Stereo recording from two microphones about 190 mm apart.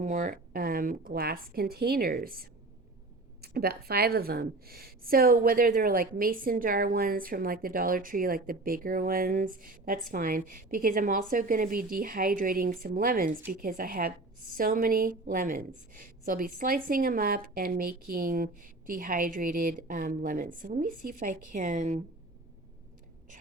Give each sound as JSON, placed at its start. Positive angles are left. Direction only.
{"t": 0.0, "sound": "a woman's voice", "side_deg": -40}